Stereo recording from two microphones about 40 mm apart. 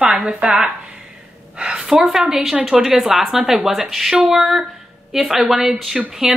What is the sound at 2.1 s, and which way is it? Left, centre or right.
Speech, centre.